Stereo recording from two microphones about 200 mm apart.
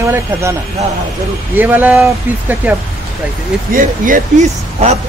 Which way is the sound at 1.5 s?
10° right (ahead or behind).